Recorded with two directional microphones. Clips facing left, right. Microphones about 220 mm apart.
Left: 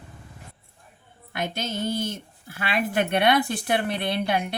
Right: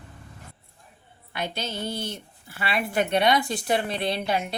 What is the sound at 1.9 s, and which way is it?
Speech, 50° left (ahead or behind).